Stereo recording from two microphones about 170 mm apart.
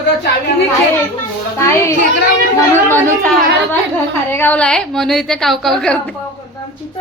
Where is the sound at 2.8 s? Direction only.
10° left (ahead or behind).